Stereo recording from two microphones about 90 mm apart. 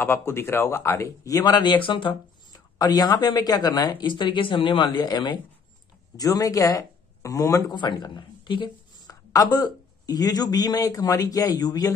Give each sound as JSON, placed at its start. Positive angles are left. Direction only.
{"t": 0.0, "sound": "speech", "side_deg": 25}
{"t": 2.5, "sound": "speech", "side_deg": 45}
{"t": 6.1, "sound": "speech", "side_deg": 40}
{"t": 7.7, "sound": "speech", "side_deg": 55}
{"t": 9.0, "sound": "a man's voice", "side_deg": 45}